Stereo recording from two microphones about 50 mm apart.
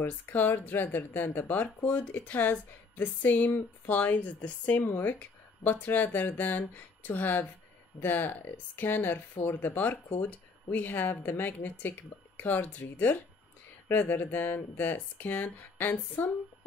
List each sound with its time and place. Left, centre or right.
0.0 s speech: left